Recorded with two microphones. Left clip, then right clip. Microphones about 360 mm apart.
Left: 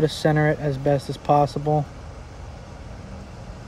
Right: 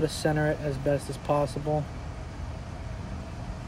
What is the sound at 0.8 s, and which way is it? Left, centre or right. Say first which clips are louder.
Speech: left 6 dB; left.